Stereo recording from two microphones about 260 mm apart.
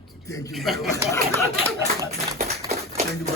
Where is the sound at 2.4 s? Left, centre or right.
Right.